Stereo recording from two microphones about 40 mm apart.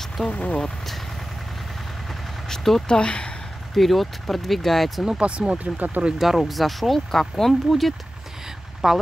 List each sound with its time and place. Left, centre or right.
0.3 s speech: left
0.6 s speech: centre
2.4 s vehicle: centre
2.9 s speech: left
3.7 s speech: centre
5.2 s speech: right
6.1 s speech: centre
8.8 s speech: centre